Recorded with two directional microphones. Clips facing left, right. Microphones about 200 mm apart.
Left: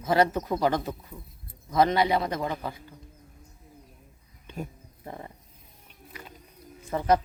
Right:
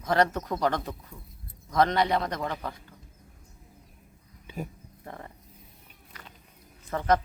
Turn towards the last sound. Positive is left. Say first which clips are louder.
# left 1 dB
turn(degrees=10)  # may be behind; listen again after turning